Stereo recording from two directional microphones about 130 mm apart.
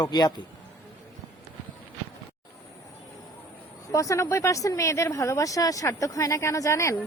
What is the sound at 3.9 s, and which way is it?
Speech, 25° left (ahead or behind).